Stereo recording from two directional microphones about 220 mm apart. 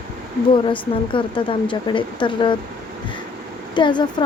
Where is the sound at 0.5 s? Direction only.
20° left (ahead or behind).